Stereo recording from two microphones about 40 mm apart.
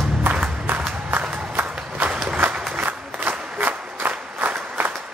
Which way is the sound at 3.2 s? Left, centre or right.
Right.